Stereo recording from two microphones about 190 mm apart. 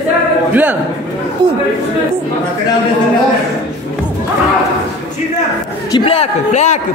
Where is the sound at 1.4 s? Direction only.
25° right (ahead or behind).